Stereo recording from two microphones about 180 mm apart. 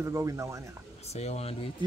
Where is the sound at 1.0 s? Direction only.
35° left (ahead or behind).